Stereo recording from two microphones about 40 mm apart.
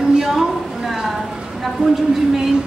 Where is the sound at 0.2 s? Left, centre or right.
Centre.